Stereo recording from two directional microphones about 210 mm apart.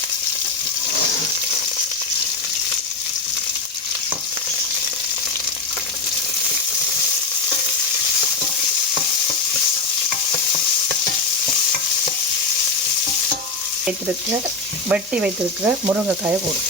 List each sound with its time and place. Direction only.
14.8 s frying: 5° right (ahead or behind)